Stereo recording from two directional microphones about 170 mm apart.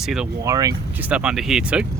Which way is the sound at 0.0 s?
Centre (ahead or behind).